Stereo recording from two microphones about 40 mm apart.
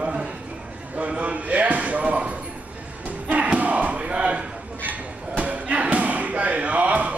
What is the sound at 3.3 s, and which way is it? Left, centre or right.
Crowd, right.